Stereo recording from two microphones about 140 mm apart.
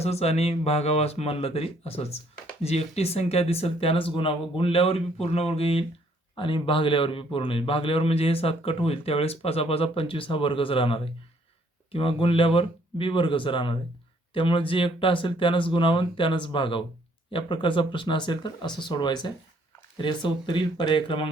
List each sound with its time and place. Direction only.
0.0 s a man's voice: 50° left (ahead or behind)